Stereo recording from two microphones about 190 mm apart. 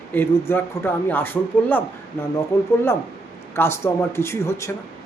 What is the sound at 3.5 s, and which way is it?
Speech, 15° left (ahead or behind).